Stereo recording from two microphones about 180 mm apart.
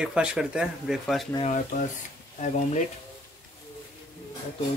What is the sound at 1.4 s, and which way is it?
Speech, 45° left (ahead or behind).